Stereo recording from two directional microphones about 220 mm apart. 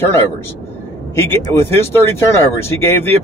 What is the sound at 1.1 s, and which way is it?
Speech, 10° left (ahead or behind).